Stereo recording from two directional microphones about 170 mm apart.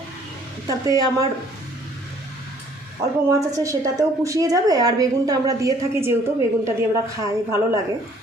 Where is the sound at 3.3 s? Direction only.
20° right (ahead or behind).